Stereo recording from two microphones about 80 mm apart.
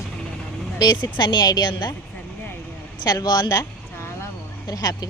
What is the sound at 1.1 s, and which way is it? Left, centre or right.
Speech, left.